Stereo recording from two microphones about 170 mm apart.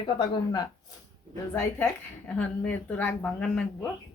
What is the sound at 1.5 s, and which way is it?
A woman's voice, 10° left (ahead or behind).